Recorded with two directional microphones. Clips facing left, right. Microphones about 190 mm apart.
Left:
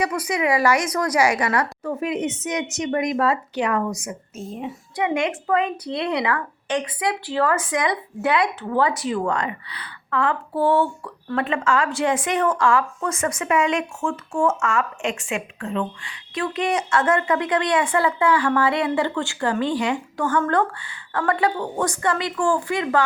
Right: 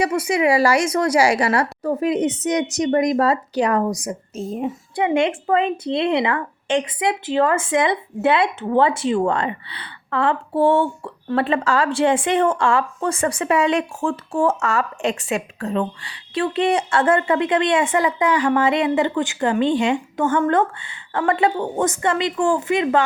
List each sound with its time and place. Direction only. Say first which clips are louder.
0.0 s a woman's voice: right 4 dB; 25° right (ahead or behind)